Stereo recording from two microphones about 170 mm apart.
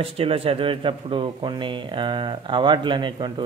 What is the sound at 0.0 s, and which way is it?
A man's voice, 35° right (ahead or behind).